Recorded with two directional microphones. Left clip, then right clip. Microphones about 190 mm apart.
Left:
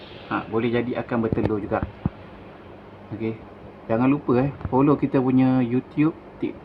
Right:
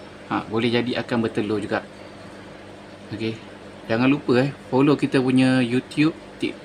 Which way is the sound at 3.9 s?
5° right (ahead or behind).